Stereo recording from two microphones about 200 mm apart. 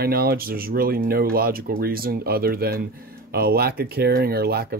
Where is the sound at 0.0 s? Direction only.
50° right (ahead or behind).